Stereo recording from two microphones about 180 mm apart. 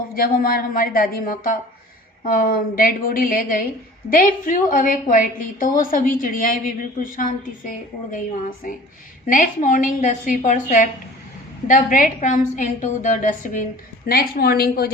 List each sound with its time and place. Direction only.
0.1 s a woman's voice: 55° left (ahead or behind)
14.1 s a woman's voice: 55° left (ahead or behind)